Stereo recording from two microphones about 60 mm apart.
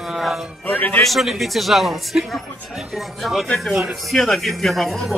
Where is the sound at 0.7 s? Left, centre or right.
Left.